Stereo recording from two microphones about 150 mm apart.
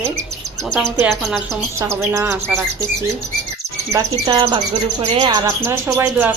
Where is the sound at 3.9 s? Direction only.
25° right (ahead or behind).